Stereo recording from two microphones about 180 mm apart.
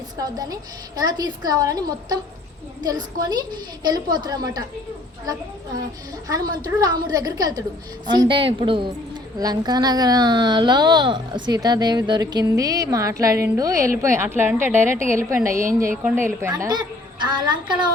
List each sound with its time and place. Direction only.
0.2 s a woman's voice: 20° right (ahead or behind)